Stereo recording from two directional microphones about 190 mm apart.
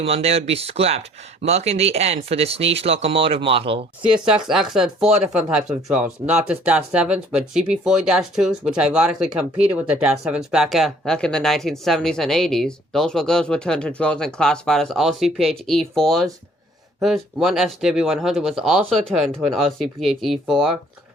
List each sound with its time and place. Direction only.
0.0 s speech: 30° right (ahead or behind)
4.1 s speech: 5° right (ahead or behind)